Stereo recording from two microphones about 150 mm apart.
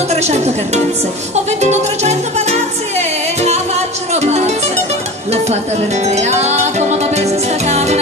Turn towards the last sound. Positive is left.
turn(degrees=-45)  # may be behind; listen again after turning